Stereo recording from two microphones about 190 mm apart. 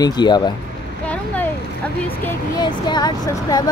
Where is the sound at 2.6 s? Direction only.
20° left (ahead or behind).